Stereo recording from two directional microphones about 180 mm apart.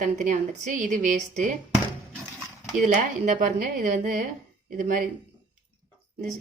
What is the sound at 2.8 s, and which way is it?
Speech, 45° right (ahead or behind).